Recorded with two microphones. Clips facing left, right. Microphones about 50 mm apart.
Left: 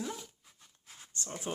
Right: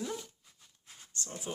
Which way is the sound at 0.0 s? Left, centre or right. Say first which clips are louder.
Right 1 dB; centre.